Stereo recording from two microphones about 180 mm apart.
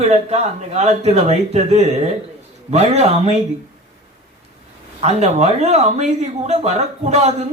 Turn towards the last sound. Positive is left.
turn(degrees=-35)  # may be behind; listen again after turning